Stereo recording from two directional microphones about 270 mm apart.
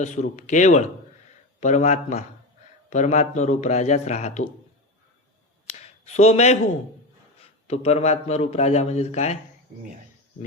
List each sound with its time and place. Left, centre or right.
0.0 s a man's voice: left
5.6 s a sound: left
7.7 s a man's voice: left
9.7 s speech: right